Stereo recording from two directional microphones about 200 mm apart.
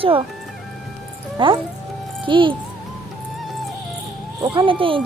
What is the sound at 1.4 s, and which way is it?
Speech, 25° right (ahead or behind).